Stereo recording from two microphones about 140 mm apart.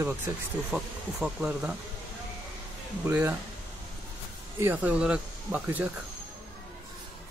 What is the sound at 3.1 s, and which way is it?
Speech, 10° right (ahead or behind).